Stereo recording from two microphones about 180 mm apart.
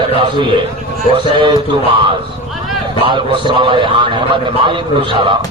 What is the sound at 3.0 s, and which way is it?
A man's voice, 25° right (ahead or behind).